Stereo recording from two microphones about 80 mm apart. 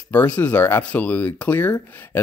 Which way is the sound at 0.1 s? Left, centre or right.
Centre.